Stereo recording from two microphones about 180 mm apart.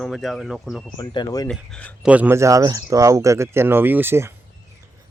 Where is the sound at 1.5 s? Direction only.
5° left (ahead or behind).